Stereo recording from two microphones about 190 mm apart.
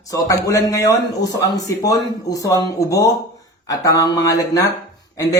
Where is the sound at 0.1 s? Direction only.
15° left (ahead or behind).